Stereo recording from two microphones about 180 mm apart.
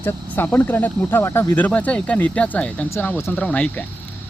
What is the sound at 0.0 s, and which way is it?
Speech, 10° left (ahead or behind).